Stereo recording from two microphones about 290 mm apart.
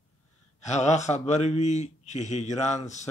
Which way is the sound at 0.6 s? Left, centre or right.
Left.